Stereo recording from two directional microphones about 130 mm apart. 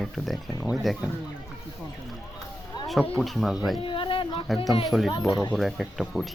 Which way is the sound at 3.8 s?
40° left (ahead or behind).